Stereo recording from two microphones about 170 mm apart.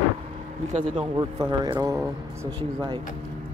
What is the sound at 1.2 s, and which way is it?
Speech, 25° right (ahead or behind).